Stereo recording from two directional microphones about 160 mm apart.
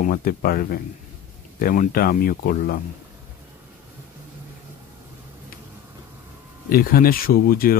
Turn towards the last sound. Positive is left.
turn(degrees=65)  # may be behind; listen again after turning